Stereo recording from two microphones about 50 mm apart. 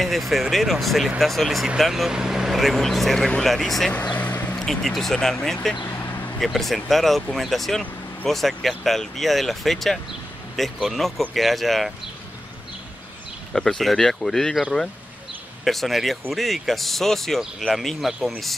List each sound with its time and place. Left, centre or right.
0.0 s speech: centre
2.0 s speech: centre
3.9 s vehicle: left
4.6 s speech: centre
5.9 s a sound: left
6.4 s speech: centre
13.5 s speech: centre